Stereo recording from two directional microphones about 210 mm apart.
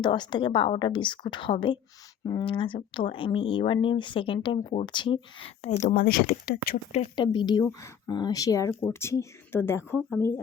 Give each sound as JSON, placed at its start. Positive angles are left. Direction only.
{"t": 0.0, "sound": "speech", "side_deg": 20}
{"t": 6.9, "sound": "speech", "side_deg": 25}